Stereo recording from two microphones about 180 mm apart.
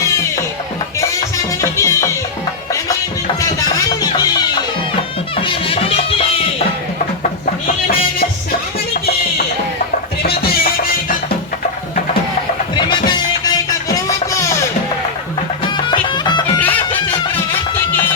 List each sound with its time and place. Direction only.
1.7 s music: 15° left (ahead or behind)
4.0 s music: 20° left (ahead or behind)
10.2 s music: 60° left (ahead or behind)
12.7 s music: 25° left (ahead or behind)
15.9 s music: 25° left (ahead or behind)
16.6 s music: 10° left (ahead or behind)